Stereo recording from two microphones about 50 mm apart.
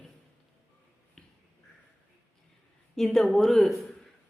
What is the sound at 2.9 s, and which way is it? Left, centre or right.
Speech, centre.